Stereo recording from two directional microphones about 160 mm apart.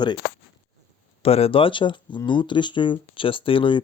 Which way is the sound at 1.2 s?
40° left (ahead or behind).